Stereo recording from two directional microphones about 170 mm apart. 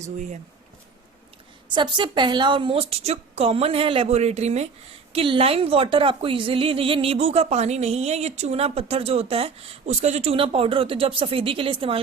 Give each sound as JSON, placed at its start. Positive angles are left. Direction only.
{"t": 0.0, "sound": "speech", "side_deg": -45}
{"t": 1.7, "sound": "a woman's voice", "side_deg": -25}